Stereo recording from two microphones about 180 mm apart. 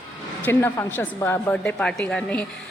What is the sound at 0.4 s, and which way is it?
A woman's voice, 10° left (ahead or behind).